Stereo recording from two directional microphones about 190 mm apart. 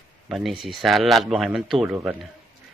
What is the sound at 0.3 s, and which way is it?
Speech, centre (ahead or behind).